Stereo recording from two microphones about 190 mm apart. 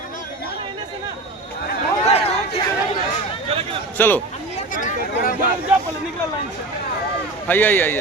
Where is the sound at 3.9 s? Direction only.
10° left (ahead or behind).